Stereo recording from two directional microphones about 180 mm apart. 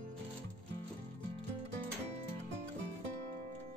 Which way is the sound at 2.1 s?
40° right (ahead or behind).